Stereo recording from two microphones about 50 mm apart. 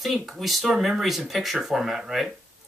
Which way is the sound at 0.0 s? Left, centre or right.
Centre.